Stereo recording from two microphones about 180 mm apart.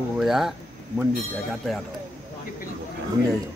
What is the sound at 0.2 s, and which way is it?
Speech, centre (ahead or behind).